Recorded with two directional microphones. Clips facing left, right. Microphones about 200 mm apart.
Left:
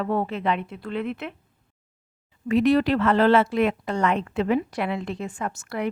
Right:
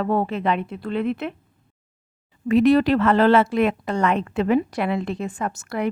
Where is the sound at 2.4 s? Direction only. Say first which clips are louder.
Right 3 dB; 45° right (ahead or behind).